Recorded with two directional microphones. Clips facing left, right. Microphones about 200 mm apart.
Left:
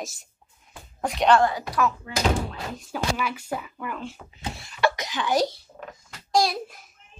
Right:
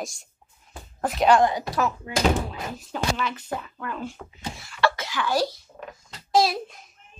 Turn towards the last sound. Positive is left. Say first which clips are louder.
# right 2 dB
turn(degrees=-5)  # may be behind; listen again after turning